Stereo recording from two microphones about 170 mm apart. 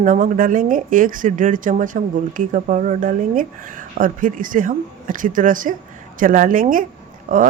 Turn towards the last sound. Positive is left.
turn(degrees=-50)  # may be behind; listen again after turning